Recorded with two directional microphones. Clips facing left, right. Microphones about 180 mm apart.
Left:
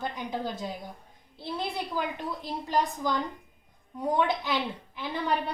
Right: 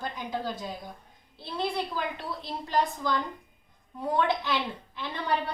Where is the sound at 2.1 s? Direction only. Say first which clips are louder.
Left 2 dB; 15° left (ahead or behind).